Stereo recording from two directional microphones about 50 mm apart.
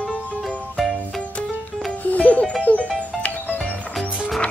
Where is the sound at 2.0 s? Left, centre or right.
Left.